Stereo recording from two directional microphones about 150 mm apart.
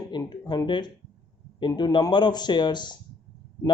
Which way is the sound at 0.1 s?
30° left (ahead or behind).